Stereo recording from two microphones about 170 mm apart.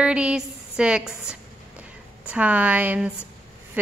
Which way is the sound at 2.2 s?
10° right (ahead or behind).